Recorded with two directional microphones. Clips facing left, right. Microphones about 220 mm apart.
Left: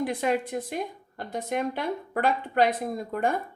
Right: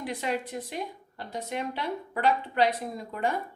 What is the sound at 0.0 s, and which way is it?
A woman's voice, 50° left (ahead or behind).